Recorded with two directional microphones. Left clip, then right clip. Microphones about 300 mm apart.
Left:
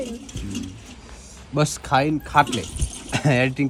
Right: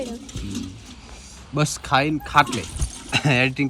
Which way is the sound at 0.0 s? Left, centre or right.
Centre.